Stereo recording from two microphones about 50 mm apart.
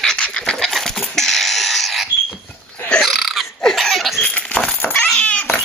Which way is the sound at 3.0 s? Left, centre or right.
Centre.